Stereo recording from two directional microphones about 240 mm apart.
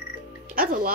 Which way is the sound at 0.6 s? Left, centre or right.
Right.